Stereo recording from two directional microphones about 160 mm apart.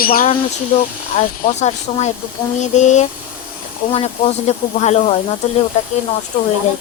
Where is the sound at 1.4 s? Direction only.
45° left (ahead or behind).